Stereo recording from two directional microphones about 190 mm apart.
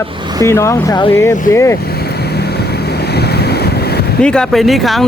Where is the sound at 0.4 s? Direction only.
15° left (ahead or behind).